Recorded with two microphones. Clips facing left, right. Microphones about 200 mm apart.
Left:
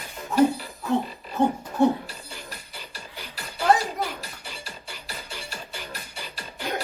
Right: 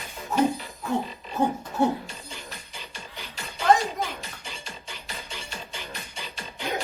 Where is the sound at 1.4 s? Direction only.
30° left (ahead or behind).